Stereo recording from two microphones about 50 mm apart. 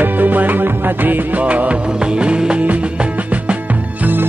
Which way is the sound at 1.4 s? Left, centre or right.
Right.